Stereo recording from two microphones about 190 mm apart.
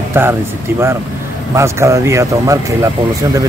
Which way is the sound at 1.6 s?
15° right (ahead or behind).